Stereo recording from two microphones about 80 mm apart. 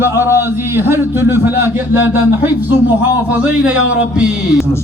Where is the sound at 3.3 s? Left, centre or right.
Centre.